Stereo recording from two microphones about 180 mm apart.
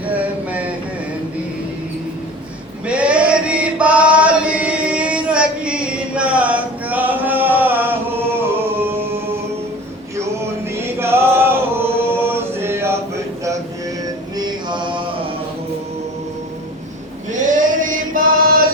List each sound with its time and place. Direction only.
2.8 s chant: 5° right (ahead or behind)
10.8 s singing: 15° right (ahead or behind)
14.3 s music: 25° right (ahead or behind)
17.3 s male singing: 45° right (ahead or behind)